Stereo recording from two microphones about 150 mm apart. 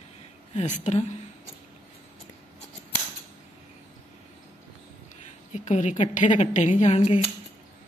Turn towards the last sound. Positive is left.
turn(degrees=40)  # may be behind; listen again after turning